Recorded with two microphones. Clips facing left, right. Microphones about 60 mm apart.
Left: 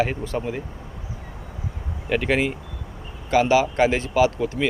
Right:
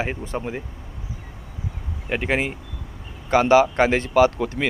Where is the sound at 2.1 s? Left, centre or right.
Right.